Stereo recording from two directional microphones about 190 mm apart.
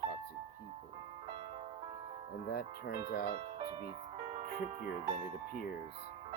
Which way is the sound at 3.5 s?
30° right (ahead or behind).